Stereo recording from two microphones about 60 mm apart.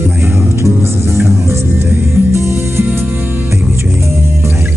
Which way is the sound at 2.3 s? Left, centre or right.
Right.